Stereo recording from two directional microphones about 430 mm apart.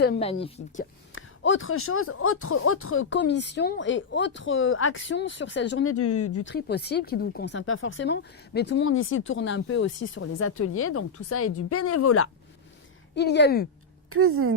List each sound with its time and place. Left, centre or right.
0.0 s speech: centre
1.1 s speech: left
14.1 s a woman's voice: right